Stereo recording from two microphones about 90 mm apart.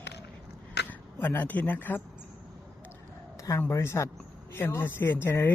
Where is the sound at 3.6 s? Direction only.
25° left (ahead or behind).